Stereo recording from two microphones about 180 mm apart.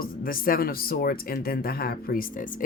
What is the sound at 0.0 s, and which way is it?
Speech, 55° left (ahead or behind).